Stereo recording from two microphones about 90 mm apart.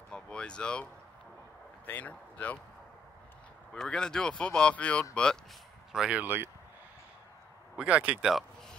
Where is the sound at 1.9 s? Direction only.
20° left (ahead or behind).